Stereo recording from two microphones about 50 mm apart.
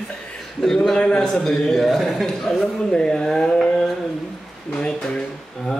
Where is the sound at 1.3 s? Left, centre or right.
Centre.